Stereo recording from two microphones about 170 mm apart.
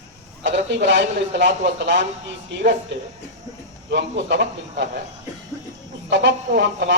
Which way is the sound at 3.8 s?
90° right.